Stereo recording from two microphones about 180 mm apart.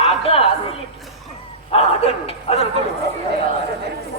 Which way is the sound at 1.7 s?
35° left (ahead or behind).